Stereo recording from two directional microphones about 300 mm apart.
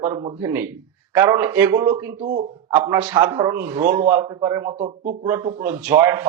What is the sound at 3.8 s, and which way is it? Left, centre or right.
Speech, right.